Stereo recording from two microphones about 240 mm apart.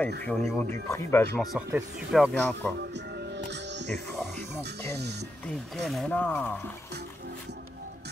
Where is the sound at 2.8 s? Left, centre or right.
Right.